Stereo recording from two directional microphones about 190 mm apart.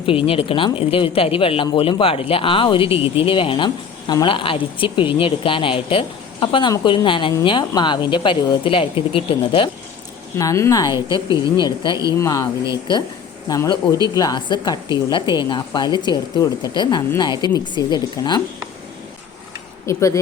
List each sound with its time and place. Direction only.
0.0 s speech: 30° left (ahead or behind)
10.3 s speech: 15° left (ahead or behind)
11.3 s speech: 15° right (ahead or behind)
11.5 s speech: 25° left (ahead or behind)
13.5 s speech: 20° left (ahead or behind)
19.8 s speech: 15° left (ahead or behind)